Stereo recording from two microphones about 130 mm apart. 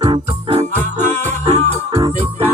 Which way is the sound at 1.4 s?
55° right (ahead or behind).